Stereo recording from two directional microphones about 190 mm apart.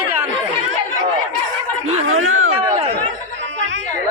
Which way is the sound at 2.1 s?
90° right.